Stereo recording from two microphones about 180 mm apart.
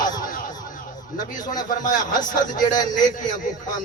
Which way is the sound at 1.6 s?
50° left (ahead or behind).